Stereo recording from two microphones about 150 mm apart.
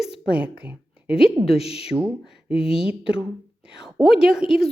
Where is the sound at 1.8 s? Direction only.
10° right (ahead or behind).